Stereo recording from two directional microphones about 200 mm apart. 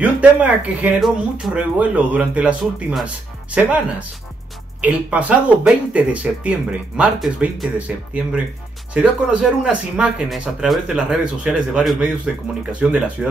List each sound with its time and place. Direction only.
0.0 s speech: 5° right (ahead or behind)
4.8 s speech: 5° right (ahead or behind)